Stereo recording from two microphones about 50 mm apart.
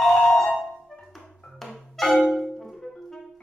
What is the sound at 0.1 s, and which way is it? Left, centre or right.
Music, left.